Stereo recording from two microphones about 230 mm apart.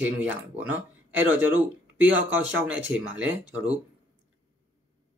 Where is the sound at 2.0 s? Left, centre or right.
Right.